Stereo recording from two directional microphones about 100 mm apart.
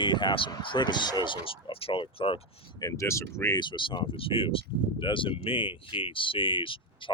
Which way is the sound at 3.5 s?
50° left (ahead or behind).